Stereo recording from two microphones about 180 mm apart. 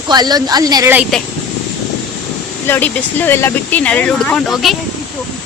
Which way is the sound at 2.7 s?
10° left (ahead or behind).